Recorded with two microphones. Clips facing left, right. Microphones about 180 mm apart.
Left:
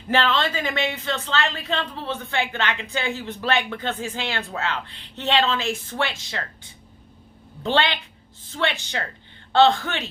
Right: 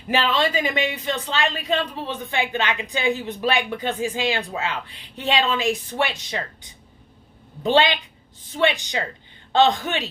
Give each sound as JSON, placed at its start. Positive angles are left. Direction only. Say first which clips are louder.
{"t": 0.1, "sound": "speech", "louder": "right 1 dB", "side_deg": -15}